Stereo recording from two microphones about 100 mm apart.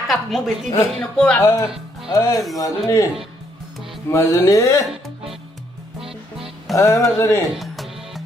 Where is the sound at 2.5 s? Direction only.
35° left (ahead or behind).